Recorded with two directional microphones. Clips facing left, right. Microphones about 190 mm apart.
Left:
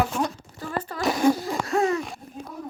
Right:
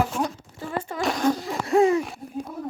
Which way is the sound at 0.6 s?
25° right (ahead or behind).